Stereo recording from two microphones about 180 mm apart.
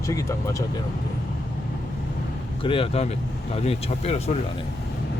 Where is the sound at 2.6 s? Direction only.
30° left (ahead or behind).